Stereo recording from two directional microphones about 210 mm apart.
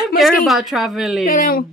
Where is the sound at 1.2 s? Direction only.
40° left (ahead or behind).